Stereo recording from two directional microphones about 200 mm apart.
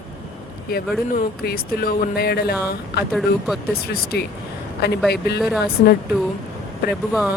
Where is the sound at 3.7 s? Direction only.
50° left (ahead or behind).